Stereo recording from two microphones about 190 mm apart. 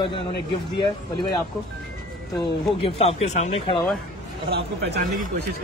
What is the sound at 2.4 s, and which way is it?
Speech, 30° left (ahead or behind).